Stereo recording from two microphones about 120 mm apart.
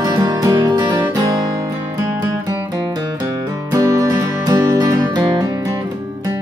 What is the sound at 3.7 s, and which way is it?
Music, 30° right (ahead or behind).